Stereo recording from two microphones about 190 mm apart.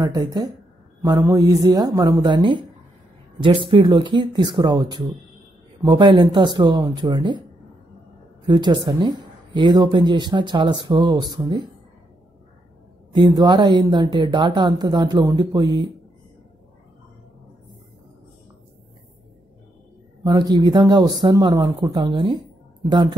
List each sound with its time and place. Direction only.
0.0 s speech: 20° right (ahead or behind)
8.5 s speech: 20° right (ahead or behind)
13.1 s speech: 20° right (ahead or behind)
20.2 s speech: 20° right (ahead or behind)